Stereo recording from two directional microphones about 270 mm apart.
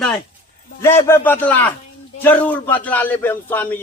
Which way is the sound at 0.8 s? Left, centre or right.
Centre.